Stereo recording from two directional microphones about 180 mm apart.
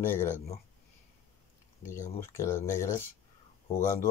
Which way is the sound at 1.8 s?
15° left (ahead or behind).